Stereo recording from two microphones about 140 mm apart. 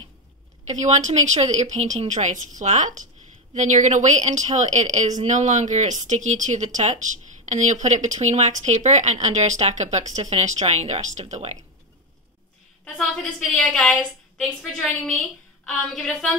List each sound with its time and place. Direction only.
0.7 s a woman's voice: 55° right (ahead or behind)
12.8 s a woman's voice: 5° left (ahead or behind)